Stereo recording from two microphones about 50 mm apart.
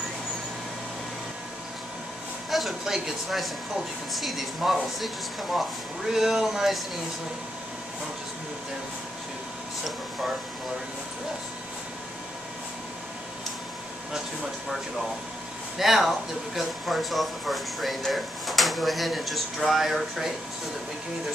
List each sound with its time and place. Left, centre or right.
2.5 s speech: centre
15.8 s speech: centre